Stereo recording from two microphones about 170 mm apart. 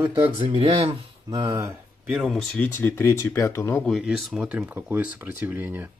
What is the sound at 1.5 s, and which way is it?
Speech, 10° right (ahead or behind).